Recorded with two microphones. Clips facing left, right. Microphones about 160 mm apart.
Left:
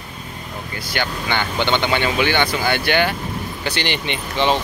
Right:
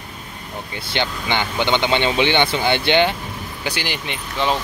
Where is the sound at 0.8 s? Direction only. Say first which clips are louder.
Right 1 dB; 20° right (ahead or behind).